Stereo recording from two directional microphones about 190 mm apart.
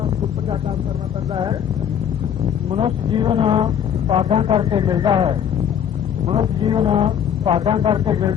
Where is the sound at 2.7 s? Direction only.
25° right (ahead or behind).